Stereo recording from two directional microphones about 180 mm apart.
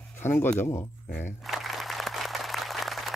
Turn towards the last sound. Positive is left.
turn(degrees=0)  # may be behind; listen again after turning